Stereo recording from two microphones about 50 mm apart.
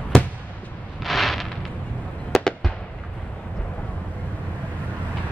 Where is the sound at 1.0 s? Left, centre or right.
Centre.